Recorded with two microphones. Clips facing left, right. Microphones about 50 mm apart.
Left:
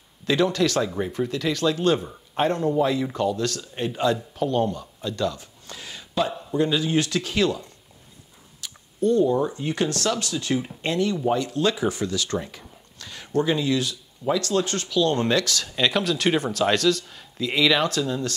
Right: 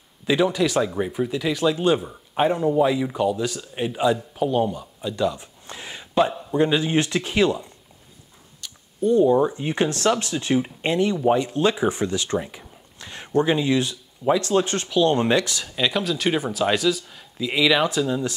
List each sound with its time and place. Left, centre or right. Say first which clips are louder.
0.3 s speech: right 1 dB; centre
8.5 s a sound: left 1 dB; centre
9.1 s speech: right 4 dB; centre
15.7 s a man's voice: even; centre